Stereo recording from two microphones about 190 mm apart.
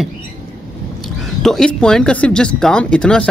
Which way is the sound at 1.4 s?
Centre (ahead or behind).